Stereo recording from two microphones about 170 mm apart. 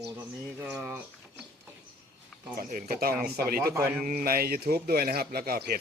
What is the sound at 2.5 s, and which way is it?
A man's voice, 60° right (ahead or behind).